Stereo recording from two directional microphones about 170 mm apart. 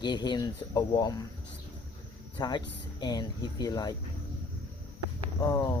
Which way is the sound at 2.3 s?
25° left (ahead or behind).